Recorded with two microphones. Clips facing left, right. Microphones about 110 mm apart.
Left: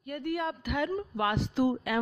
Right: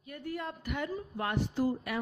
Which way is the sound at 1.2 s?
90° left.